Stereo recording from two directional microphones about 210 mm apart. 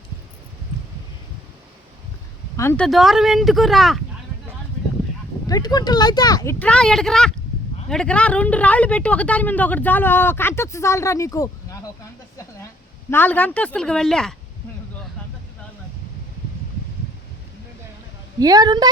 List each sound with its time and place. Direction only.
2.6 s speech: 10° left (ahead or behind)
5.5 s speech: 20° left (ahead or behind)
13.1 s speech: 10° left (ahead or behind)
18.3 s a woman's voice: 15° right (ahead or behind)